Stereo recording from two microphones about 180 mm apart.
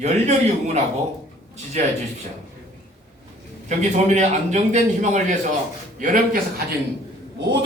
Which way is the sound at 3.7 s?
40° right (ahead or behind).